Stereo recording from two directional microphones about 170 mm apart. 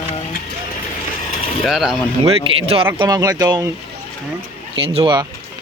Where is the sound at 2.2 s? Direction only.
35° right (ahead or behind).